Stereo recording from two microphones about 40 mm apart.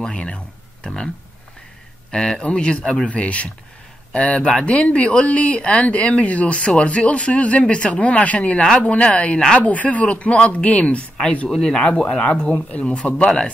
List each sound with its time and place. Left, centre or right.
0.0 s speech: left
4.4 s speech: left
11.4 s speech: centre
11.8 s speech: left